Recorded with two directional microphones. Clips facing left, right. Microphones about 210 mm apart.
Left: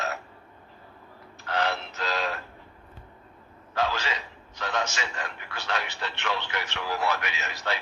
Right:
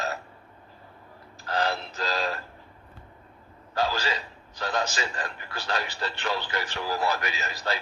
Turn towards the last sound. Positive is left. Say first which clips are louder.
# right 2 dB
turn(degrees=-35)  # may be behind; listen again after turning